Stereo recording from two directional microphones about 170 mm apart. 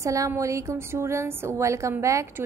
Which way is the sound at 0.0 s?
20° right (ahead or behind).